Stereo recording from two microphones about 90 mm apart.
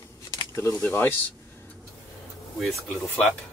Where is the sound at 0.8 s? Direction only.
20° left (ahead or behind).